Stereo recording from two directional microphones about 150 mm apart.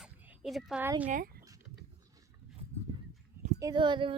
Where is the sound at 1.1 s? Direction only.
80° right.